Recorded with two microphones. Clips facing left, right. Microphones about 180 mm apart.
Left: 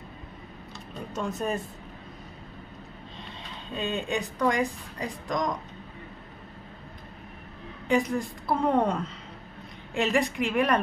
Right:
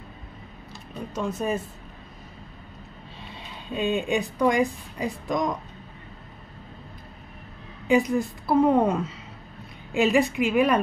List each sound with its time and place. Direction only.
0.9 s a woman's voice: centre (ahead or behind)
3.7 s a woman's voice: 10° right (ahead or behind)
7.9 s a woman's voice: 5° right (ahead or behind)